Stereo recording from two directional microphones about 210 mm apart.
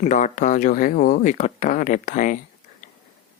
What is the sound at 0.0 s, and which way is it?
Speech, 35° left (ahead or behind).